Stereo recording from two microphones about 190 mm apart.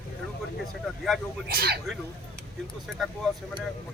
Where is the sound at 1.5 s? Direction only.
55° right (ahead or behind).